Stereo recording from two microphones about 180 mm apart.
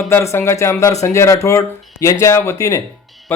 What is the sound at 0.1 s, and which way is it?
A man's voice, 15° left (ahead or behind).